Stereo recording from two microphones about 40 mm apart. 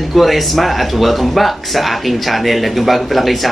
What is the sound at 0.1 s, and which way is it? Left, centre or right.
Speech, centre.